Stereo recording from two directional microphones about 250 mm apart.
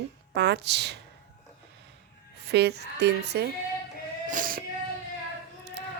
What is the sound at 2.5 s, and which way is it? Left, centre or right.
A woman's voice, right.